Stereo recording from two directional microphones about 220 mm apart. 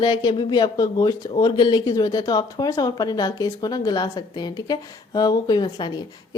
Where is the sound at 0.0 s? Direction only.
20° left (ahead or behind).